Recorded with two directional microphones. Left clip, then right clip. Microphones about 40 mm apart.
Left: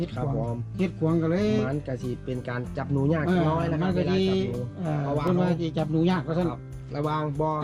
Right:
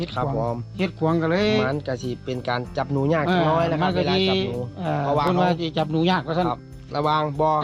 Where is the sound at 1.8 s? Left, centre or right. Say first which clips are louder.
Right 5 dB; left.